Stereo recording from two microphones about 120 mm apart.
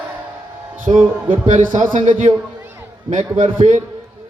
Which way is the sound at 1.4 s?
90° right.